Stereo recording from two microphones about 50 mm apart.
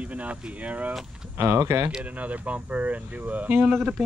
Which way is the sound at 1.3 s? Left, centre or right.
Right.